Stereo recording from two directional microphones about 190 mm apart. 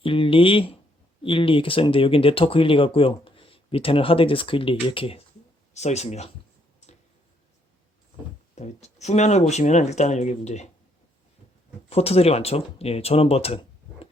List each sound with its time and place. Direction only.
0.0 s speech: 30° left (ahead or behind)
8.5 s speech: 35° left (ahead or behind)
11.9 s speech: 30° left (ahead or behind)